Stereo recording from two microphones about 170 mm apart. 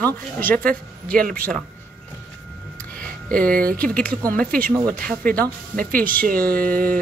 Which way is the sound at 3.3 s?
10° left (ahead or behind).